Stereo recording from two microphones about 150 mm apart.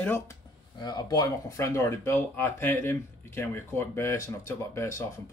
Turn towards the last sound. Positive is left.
turn(degrees=20)  # may be behind; listen again after turning